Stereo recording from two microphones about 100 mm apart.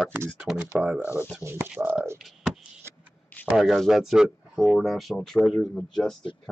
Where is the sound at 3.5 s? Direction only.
Centre (ahead or behind).